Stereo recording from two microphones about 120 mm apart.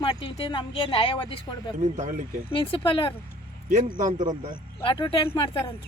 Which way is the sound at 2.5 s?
50° left (ahead or behind).